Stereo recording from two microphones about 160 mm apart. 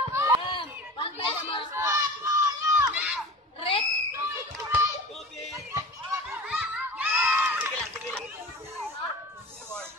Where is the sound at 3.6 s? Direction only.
35° left (ahead or behind).